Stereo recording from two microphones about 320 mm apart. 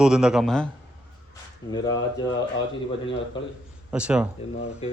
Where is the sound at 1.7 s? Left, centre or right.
Centre.